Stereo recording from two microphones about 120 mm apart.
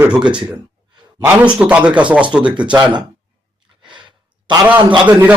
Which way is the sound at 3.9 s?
40° right (ahead or behind).